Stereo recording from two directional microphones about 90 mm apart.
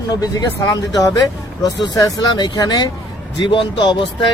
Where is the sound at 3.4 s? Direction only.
60° left (ahead or behind).